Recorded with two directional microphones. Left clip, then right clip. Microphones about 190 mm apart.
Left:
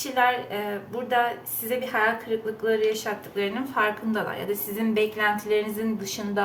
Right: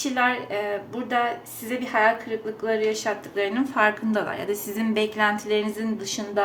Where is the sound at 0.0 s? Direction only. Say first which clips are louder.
Even; 30° right (ahead or behind).